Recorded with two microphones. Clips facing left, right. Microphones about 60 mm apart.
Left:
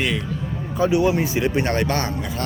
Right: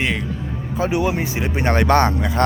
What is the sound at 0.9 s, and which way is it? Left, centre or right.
Speech, right.